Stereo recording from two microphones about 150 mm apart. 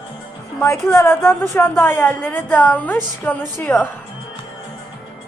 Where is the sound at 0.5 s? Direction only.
20° left (ahead or behind).